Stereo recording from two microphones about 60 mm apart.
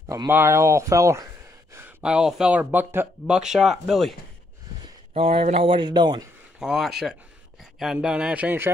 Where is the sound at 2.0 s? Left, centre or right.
Centre.